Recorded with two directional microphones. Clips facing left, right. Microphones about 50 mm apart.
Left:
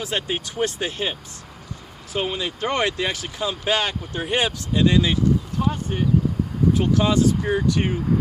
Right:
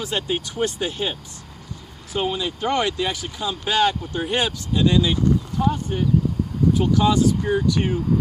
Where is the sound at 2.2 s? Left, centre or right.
Left.